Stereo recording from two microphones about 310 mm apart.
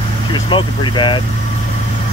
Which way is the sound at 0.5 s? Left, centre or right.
Centre.